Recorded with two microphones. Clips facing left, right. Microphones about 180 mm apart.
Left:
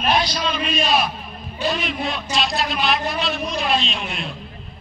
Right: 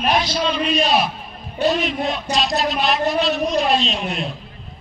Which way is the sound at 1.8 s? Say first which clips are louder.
Right 3 dB; 40° right (ahead or behind).